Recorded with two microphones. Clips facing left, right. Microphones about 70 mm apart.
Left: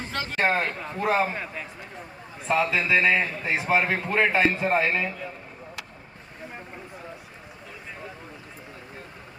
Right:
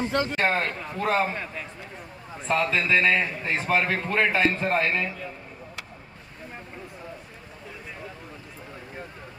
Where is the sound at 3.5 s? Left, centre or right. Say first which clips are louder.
Left 1 dB; centre.